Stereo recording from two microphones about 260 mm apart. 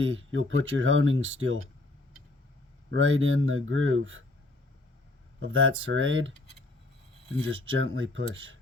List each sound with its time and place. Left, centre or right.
0.0 s speech: right
2.9 s speech: right
5.4 s speech: right
7.8 s speech: right